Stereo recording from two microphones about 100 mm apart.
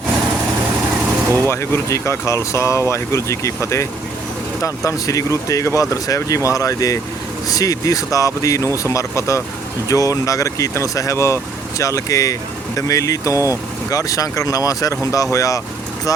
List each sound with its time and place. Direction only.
1.5 s speech: 25° left (ahead or behind)